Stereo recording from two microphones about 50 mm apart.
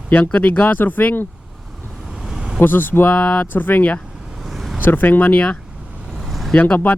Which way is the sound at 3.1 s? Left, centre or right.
Left.